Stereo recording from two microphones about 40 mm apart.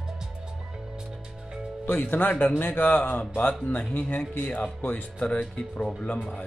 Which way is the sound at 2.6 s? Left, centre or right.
Left.